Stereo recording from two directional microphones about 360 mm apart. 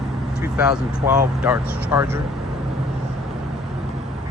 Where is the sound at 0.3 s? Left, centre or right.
Centre.